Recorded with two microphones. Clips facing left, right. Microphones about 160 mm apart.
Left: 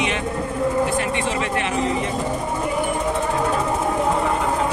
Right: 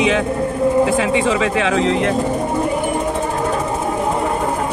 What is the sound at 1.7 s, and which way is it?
Speech, 90° right.